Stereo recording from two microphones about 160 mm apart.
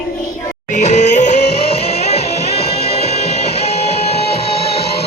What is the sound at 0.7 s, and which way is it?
Music, 45° left (ahead or behind).